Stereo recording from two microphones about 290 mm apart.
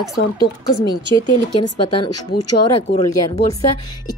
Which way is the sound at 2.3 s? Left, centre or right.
Left.